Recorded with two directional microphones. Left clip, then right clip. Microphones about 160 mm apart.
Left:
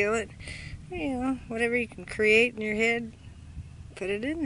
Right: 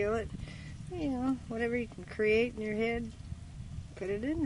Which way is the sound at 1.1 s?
10° left (ahead or behind).